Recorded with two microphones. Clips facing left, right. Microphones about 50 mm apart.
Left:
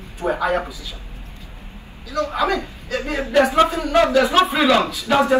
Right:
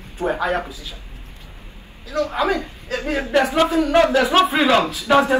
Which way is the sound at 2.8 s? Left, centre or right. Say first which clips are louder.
Right 1 dB; right.